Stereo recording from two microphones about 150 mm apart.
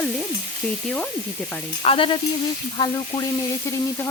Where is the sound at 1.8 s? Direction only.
35° left (ahead or behind).